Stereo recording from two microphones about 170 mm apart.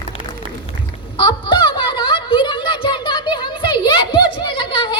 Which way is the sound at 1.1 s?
30° left (ahead or behind).